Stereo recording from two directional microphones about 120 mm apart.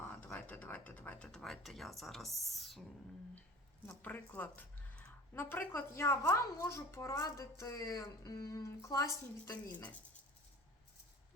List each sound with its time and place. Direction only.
0.0 s speech: 15° left (ahead or behind)
3.8 s speech: 15° left (ahead or behind)
9.7 s speech: 10° left (ahead or behind)